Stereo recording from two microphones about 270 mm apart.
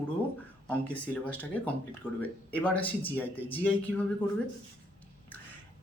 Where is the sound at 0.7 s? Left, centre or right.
Centre.